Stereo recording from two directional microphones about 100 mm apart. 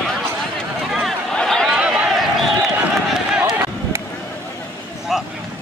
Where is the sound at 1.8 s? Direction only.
10° right (ahead or behind).